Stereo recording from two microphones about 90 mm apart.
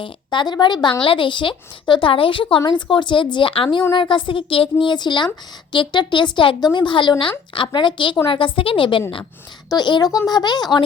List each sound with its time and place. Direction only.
0.0 s a woman's voice: 60° left (ahead or behind)
1.0 s a woman's voice: 70° left (ahead or behind)
6.6 s a woman's voice: 55° left (ahead or behind); by 9.0 s 75° left (ahead or behind)
9.6 s speech: 55° left (ahead or behind)